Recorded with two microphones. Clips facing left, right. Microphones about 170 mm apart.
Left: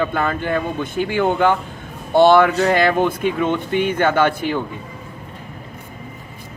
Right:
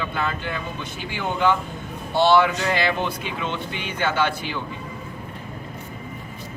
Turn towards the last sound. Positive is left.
turn(degrees=50)  # may be behind; listen again after turning